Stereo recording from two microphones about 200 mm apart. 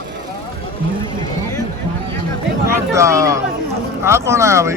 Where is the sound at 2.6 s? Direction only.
15° right (ahead or behind).